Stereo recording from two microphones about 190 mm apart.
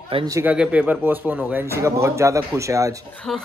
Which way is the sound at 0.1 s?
25° right (ahead or behind).